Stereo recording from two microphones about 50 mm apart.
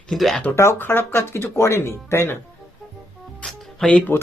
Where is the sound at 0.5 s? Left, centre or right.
Left.